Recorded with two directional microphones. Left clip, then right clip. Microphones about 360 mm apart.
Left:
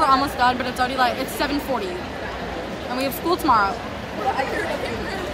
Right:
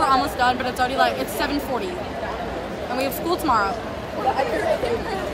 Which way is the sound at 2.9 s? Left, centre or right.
Centre.